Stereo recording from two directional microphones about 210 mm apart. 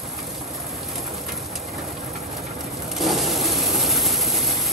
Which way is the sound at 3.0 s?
Centre (ahead or behind).